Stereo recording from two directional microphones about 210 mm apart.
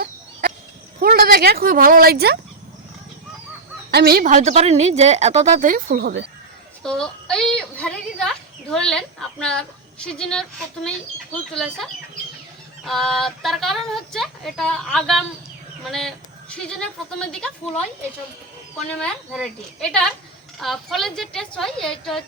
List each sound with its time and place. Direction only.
0.9 s speech: 45° right (ahead or behind)
3.9 s a woman's voice: 45° right (ahead or behind)
6.8 s a sound: 5° left (ahead or behind)
11.5 s speech: centre (ahead or behind)
18.9 s speech: 5° left (ahead or behind)